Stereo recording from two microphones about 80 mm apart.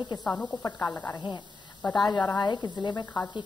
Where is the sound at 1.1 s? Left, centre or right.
Left.